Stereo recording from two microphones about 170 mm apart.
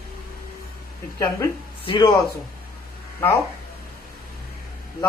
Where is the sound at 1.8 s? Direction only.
30° left (ahead or behind).